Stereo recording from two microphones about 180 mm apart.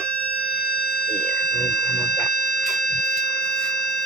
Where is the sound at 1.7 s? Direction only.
60° left (ahead or behind).